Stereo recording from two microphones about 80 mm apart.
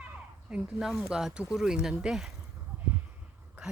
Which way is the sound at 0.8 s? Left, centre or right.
Centre.